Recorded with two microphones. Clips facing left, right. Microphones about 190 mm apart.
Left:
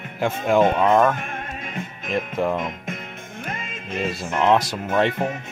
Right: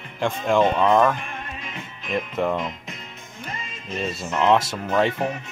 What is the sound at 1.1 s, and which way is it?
Music, 50° left (ahead or behind).